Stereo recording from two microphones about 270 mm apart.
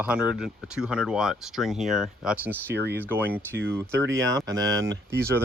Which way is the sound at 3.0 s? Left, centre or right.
Centre.